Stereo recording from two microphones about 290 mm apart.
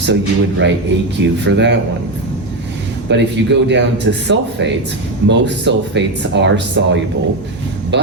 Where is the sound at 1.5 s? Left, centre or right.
Right.